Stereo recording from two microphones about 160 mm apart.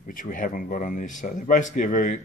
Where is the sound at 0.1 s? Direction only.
55° left (ahead or behind).